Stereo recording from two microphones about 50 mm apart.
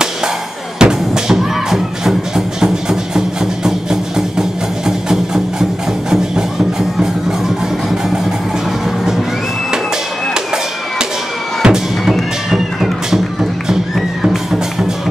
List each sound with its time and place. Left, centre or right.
0.7 s music: centre
11.6 s music: centre